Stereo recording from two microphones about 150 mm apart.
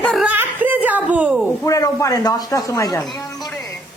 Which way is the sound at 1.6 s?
20° left (ahead or behind).